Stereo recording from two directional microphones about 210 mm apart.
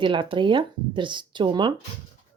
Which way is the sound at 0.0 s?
25° right (ahead or behind).